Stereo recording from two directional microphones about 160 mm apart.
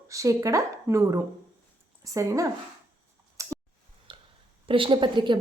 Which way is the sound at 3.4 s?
20° right (ahead or behind).